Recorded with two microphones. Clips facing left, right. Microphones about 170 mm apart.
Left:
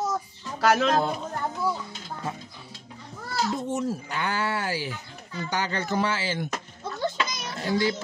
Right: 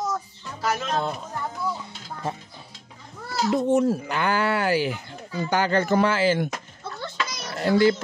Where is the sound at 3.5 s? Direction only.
65° right (ahead or behind).